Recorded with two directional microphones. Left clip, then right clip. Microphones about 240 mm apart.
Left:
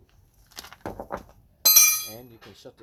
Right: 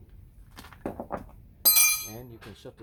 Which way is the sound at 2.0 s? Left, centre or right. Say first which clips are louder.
Left 2 dB; left.